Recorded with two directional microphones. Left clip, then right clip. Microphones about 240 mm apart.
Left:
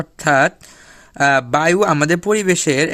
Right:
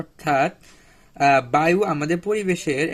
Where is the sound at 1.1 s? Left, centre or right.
Left.